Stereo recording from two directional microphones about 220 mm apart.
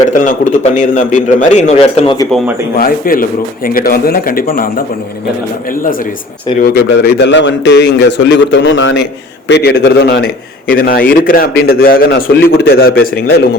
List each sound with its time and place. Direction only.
0.3 s a man's voice: 35° left (ahead or behind)
2.7 s a man's voice: 40° left (ahead or behind)
6.6 s a man's voice: 50° left (ahead or behind)
9.5 s a man's voice: 45° left (ahead or behind)